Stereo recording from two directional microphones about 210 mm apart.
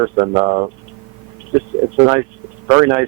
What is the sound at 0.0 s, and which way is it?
Speech, 20° right (ahead or behind).